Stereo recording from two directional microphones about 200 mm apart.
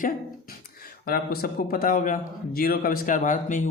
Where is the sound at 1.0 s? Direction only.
50° left (ahead or behind).